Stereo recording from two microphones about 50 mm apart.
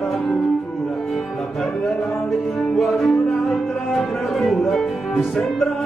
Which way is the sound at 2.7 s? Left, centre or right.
Centre.